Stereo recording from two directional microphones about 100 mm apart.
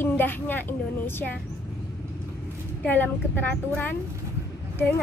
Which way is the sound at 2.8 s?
20° left (ahead or behind).